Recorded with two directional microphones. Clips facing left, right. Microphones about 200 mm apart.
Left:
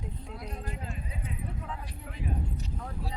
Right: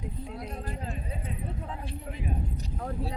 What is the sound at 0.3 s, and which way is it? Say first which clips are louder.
Speech: right 3 dB; 35° right (ahead or behind).